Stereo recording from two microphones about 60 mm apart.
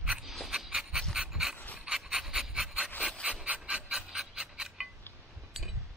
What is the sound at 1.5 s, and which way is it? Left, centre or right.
Pant, left.